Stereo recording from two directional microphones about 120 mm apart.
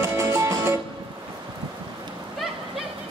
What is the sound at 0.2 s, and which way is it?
Music, 25° right (ahead or behind).